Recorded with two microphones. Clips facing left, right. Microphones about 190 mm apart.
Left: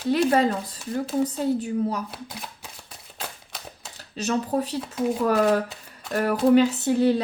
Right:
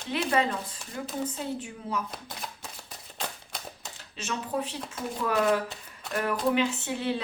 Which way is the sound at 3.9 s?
40° left (ahead or behind).